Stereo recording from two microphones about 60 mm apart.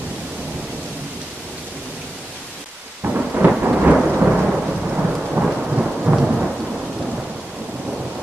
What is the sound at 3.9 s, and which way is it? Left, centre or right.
Thunder, centre.